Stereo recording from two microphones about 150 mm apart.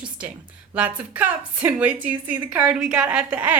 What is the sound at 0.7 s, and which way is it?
A woman's voice, 10° right (ahead or behind).